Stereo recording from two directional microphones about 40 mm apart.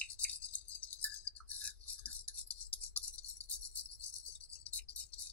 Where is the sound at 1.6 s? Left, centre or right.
Left.